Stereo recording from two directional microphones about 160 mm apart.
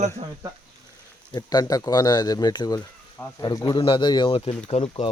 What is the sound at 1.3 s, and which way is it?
A man's voice, 25° left (ahead or behind).